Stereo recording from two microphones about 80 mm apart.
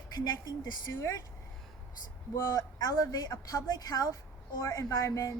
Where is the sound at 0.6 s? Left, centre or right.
Left.